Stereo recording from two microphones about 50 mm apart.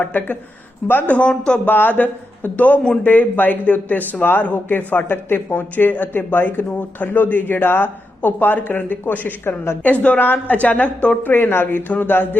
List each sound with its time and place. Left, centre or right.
0.0 s speech: left
1.5 s speech: left
9.4 s speech: left
9.8 s speech: left
11.3 s speech: left